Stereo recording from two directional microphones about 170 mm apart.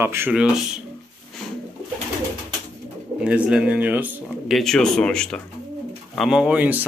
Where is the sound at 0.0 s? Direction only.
15° right (ahead or behind).